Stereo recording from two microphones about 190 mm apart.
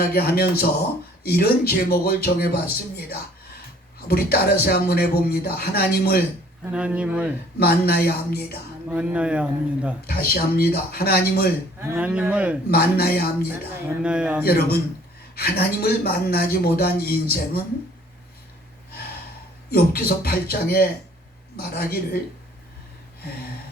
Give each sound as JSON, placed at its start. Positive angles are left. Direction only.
{"t": 0.0, "sound": "speech", "side_deg": 55}
{"t": 6.7, "sound": "speech", "side_deg": -5}
{"t": 7.6, "sound": "speech", "side_deg": 55}
{"t": 8.9, "sound": "speech", "side_deg": -5}
{"t": 10.1, "sound": "speech", "side_deg": 55}
{"t": 11.8, "sound": "speech", "side_deg": -10}
{"t": 12.7, "sound": "speech", "side_deg": 55}
{"t": 14.0, "sound": "speech", "side_deg": -5}
{"t": 14.4, "sound": "speech", "side_deg": 55}
{"t": 19.7, "sound": "speech", "side_deg": 55}